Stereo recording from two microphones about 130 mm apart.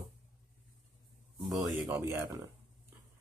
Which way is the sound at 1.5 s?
20° right (ahead or behind).